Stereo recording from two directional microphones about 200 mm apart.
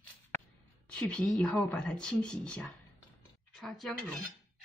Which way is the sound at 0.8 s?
5° left (ahead or behind).